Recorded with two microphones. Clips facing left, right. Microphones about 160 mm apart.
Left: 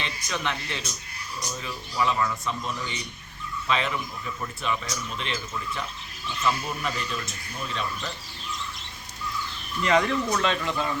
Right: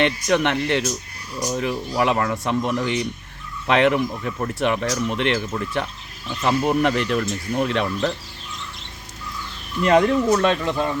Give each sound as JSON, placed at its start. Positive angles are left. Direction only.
{"t": 0.0, "sound": "speech", "side_deg": -70}
{"t": 9.8, "sound": "speech", "side_deg": -50}